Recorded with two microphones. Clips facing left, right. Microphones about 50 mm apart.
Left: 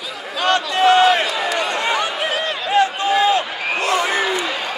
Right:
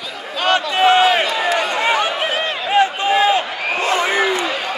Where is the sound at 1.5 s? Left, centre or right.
Right.